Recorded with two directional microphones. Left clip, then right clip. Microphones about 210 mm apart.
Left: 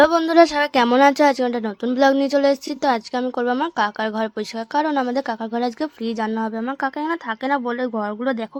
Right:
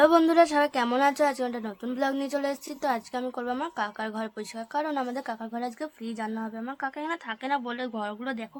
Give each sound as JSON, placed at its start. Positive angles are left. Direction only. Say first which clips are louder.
{"t": 0.0, "sound": "a woman's voice", "louder": "left 6 dB", "side_deg": 20}